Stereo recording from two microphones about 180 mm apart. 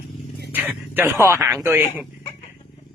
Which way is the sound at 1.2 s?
15° right (ahead or behind).